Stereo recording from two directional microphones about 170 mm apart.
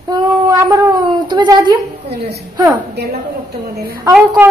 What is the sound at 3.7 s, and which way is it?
Speech, 65° right (ahead or behind).